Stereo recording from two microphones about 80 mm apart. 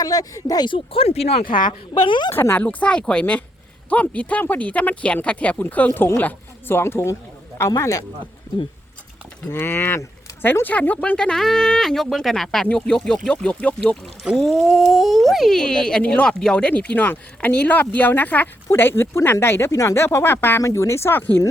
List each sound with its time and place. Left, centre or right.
0.0 s speech: left
1.5 s a woman's voice: left
2.3 s speech: left
2.6 s speech: centre; by 8.0 s left
9.5 s speech: left
14.3 s speech: centre; by 20.6 s left
20.6 s speech: left